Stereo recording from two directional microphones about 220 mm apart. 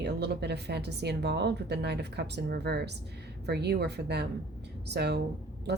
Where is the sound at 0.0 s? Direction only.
50° right (ahead or behind).